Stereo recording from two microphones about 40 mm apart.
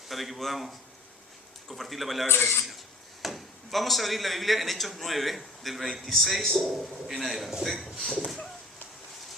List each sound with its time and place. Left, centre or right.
0.1 s speech: centre
2.3 s speech: left
3.2 s speech: centre